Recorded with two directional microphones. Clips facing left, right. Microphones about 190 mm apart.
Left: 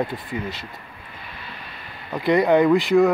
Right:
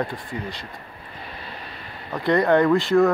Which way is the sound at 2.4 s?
15° left (ahead or behind).